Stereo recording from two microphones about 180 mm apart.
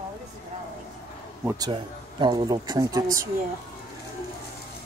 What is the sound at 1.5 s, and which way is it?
Speech, 25° right (ahead or behind).